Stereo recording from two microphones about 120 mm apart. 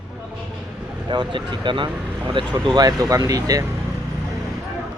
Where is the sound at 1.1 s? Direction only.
40° right (ahead or behind).